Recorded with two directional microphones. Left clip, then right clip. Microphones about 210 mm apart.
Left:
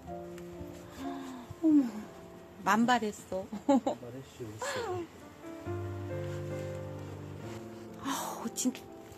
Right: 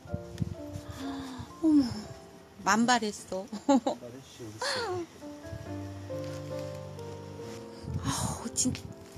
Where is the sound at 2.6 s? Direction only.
15° right (ahead or behind).